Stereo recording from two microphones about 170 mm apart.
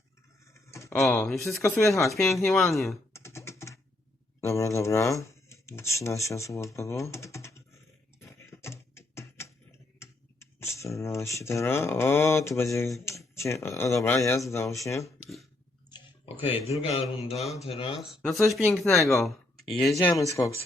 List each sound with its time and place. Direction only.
0.5 s a sound: 15° left (ahead or behind)
1.6 s speech: 15° left (ahead or behind)
2.2 s speech: centre (ahead or behind)
3.1 s typing: 15° left (ahead or behind)
4.4 s speech: 15° left (ahead or behind)
8.2 s beatboxing: 15° left (ahead or behind)
10.0 s speech: 15° left (ahead or behind)
16.4 s mantra: 30° left (ahead or behind)
17.3 s speech: centre (ahead or behind)
17.6 s mantra: 35° left (ahead or behind)
18.0 s speech: centre (ahead or behind)
20.1 s speech: 20° left (ahead or behind)